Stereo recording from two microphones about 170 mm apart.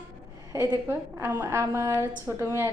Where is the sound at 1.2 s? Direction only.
15° right (ahead or behind).